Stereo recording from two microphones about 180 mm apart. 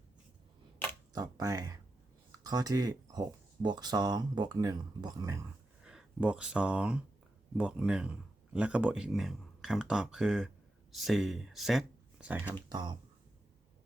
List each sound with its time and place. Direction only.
1.1 s speech: 20° right (ahead or behind)
5.8 s speech: 5° right (ahead or behind)
12.6 s speech: 25° right (ahead or behind)